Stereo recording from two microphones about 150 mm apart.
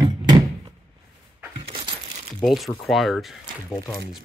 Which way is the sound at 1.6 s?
35° right (ahead or behind).